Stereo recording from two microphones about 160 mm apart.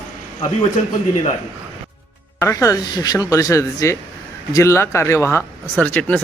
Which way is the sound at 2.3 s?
20° left (ahead or behind).